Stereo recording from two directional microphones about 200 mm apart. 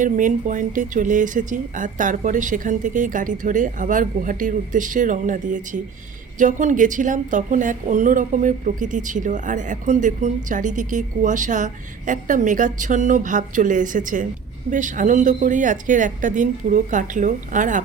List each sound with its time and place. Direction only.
0.0 s a woman's voice: 40° right (ahead or behind)